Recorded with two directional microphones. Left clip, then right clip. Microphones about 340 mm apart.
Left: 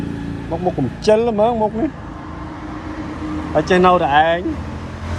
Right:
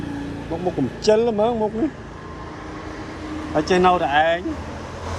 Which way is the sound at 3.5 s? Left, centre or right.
Centre.